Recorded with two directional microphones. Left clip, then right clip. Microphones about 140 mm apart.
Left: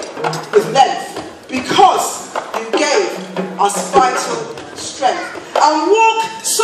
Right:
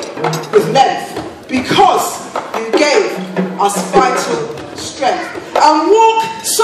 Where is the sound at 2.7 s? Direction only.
30° right (ahead or behind).